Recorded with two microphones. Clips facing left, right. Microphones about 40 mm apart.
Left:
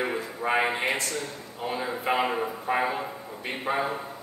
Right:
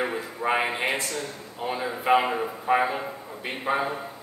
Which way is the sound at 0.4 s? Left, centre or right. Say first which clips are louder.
Right 1 dB; centre.